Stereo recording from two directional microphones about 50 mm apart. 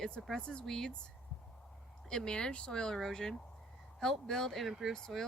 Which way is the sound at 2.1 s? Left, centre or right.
Centre.